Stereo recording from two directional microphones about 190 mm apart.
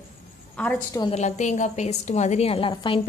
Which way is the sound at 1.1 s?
40° left (ahead or behind).